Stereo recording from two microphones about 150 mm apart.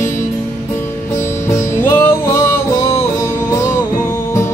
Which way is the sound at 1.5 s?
15° left (ahead or behind).